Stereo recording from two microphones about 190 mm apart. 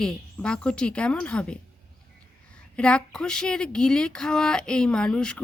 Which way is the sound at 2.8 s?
5° left (ahead or behind).